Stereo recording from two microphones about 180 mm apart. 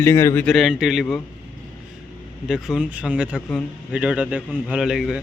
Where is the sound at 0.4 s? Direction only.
Centre (ahead or behind).